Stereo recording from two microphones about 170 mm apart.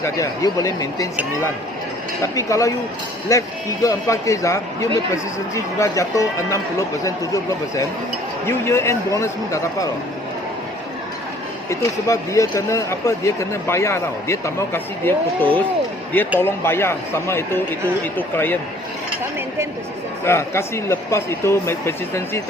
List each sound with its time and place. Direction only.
0.0 s speech: 20° left (ahead or behind)
2.2 s speech: 20° left (ahead or behind)
11.7 s speech: 20° left (ahead or behind)
20.2 s speech: 15° left (ahead or behind)